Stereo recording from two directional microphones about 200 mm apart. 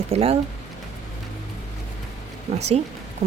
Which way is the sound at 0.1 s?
30° right (ahead or behind).